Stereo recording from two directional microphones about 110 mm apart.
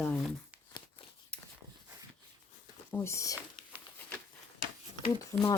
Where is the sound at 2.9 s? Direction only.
25° left (ahead or behind).